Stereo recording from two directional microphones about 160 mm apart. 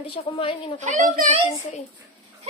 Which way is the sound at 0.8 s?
50° right (ahead or behind).